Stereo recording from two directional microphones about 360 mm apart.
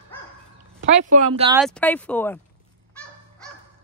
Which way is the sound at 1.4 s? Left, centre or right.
Centre.